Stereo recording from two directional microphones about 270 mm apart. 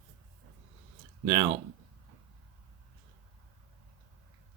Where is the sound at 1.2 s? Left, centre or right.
Centre.